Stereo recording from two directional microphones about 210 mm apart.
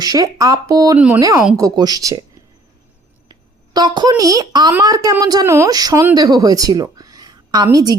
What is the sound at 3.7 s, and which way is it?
Speech, 20° right (ahead or behind).